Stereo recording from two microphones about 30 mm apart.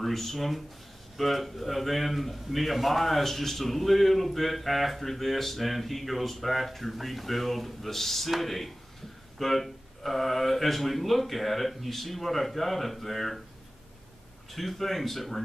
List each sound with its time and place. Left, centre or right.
0.0 s a man's voice: centre
14.5 s a man's voice: centre